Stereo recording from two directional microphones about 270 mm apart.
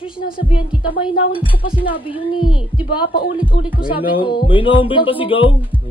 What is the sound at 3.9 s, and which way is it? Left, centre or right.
Speech, centre.